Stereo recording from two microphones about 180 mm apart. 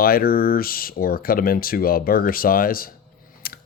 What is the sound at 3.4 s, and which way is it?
Typing, 55° left (ahead or behind).